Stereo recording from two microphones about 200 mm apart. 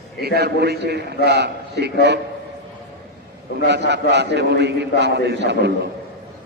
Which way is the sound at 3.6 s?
60° right (ahead or behind).